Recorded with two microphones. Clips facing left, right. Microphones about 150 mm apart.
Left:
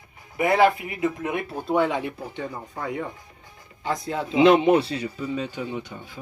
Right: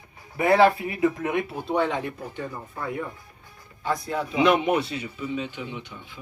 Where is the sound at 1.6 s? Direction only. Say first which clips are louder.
Left 5 dB; 10° left (ahead or behind).